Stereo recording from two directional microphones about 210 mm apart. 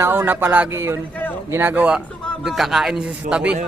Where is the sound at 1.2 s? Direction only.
10° left (ahead or behind).